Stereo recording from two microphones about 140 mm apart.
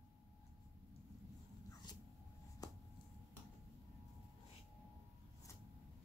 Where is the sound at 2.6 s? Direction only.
25° left (ahead or behind).